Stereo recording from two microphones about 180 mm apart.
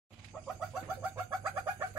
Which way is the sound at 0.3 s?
10° left (ahead or behind).